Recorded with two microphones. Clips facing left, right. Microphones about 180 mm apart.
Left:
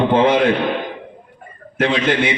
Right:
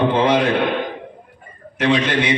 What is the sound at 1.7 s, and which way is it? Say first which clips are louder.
Speech: left 1 dB; 50° left (ahead or behind).